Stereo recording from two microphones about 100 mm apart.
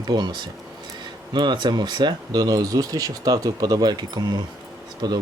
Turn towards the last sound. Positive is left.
turn(degrees=-40)  # may be behind; listen again after turning